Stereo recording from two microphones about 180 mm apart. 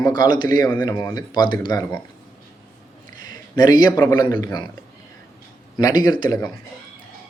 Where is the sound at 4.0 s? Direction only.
15° left (ahead or behind).